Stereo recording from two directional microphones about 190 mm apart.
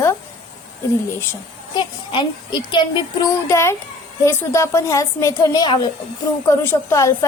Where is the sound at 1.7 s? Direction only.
25° left (ahead or behind).